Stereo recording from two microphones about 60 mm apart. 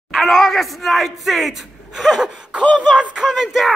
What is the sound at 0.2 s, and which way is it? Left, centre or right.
Speech, centre.